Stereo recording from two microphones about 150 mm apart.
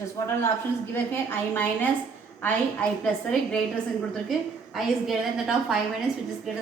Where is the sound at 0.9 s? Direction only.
15° left (ahead or behind).